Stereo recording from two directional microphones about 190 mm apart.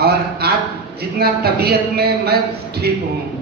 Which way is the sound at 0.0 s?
55° right (ahead or behind).